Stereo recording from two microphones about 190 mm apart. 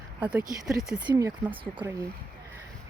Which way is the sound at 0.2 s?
10° right (ahead or behind).